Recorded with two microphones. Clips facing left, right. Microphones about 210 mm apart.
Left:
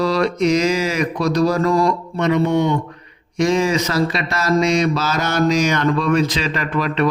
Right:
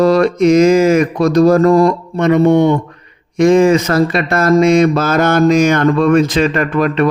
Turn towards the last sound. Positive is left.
turn(degrees=-50)  # may be behind; listen again after turning